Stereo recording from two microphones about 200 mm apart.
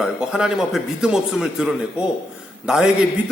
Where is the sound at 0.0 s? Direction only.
5° right (ahead or behind).